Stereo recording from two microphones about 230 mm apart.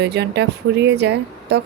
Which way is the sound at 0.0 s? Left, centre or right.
Right.